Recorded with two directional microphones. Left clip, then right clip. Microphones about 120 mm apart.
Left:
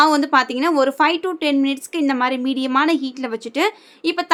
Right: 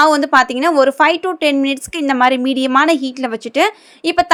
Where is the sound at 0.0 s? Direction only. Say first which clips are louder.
Right 4 dB; 30° right (ahead or behind).